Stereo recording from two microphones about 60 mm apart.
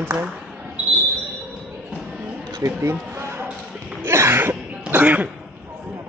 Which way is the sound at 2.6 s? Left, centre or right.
Right.